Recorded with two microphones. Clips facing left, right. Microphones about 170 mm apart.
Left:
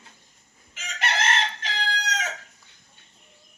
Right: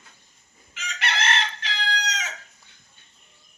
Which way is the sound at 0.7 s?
45° left (ahead or behind).